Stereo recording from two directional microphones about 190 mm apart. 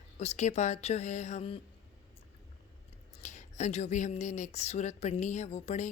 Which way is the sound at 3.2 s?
40° left (ahead or behind).